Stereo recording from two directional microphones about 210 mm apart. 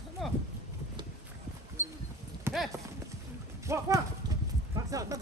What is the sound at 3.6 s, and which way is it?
Clip-clop, 15° right (ahead or behind).